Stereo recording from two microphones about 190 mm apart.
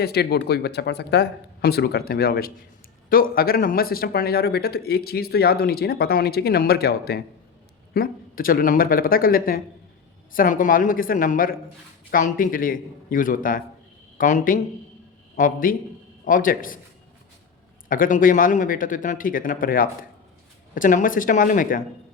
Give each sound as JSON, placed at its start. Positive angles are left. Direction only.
{"t": 0.0, "sound": "speech", "side_deg": 55}
{"t": 17.8, "sound": "speech", "side_deg": 45}